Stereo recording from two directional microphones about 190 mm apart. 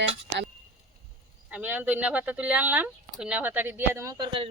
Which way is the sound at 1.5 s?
10° right (ahead or behind).